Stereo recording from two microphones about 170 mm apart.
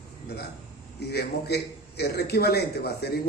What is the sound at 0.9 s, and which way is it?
A man's voice, 75° left (ahead or behind).